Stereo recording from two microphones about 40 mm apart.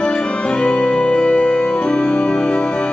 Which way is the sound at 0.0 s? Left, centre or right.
Left.